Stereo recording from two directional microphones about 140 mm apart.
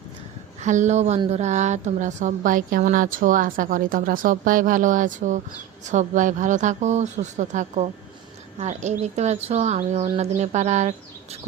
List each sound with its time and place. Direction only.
0.6 s a woman's voice: 60° right (ahead or behind)